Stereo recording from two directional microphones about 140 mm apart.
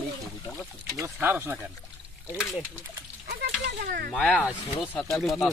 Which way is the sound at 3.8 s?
90° right.